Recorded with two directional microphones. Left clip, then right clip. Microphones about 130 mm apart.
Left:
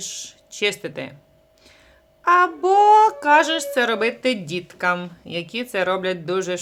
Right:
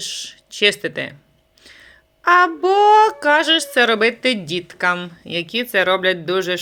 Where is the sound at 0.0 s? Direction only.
20° right (ahead or behind).